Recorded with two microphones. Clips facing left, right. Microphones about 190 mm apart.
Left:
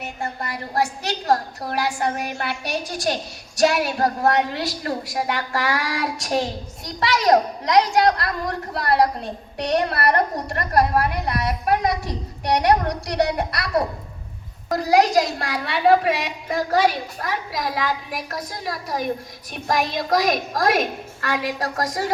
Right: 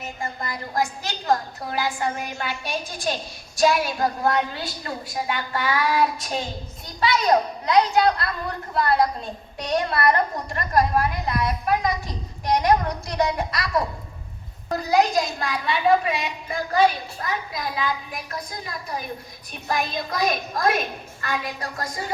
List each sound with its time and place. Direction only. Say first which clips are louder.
0.0 s a woman's voice: left 2 dB; 65° left (ahead or behind)
1.7 s a woman's voice: left 2 dB; 70° left (ahead or behind)
14.7 s a woman's voice: left 3 dB; 90° left